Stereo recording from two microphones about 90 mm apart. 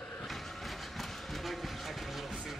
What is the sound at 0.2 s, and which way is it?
Train, centre (ahead or behind).